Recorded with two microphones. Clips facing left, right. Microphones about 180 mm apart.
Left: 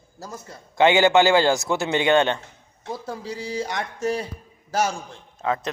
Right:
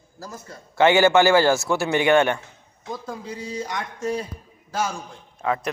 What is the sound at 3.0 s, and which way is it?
Speech, 80° left.